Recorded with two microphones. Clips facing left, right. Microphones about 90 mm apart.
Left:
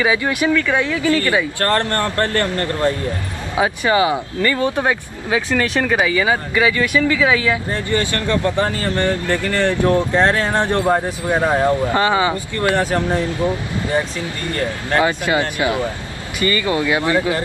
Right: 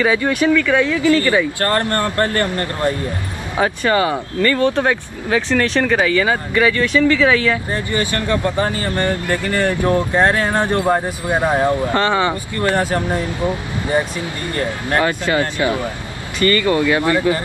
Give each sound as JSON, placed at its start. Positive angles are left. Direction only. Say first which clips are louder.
{"t": 0.0, "sound": "speech", "louder": "right 2 dB", "side_deg": 15}
{"t": 1.6, "sound": "speech", "louder": "even", "side_deg": -15}
{"t": 3.5, "sound": "speech", "louder": "even", "side_deg": 10}
{"t": 7.7, "sound": "speech", "louder": "even", "side_deg": -15}
{"t": 11.8, "sound": "speech", "louder": "even", "side_deg": 15}
{"t": 12.7, "sound": "speech", "louder": "left 1 dB", "side_deg": -10}
{"t": 15.0, "sound": "speech", "louder": "even", "side_deg": 15}